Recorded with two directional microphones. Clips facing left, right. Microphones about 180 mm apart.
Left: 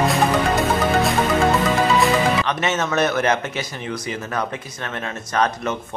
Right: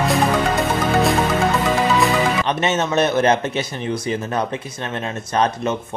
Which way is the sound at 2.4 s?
30° right (ahead or behind).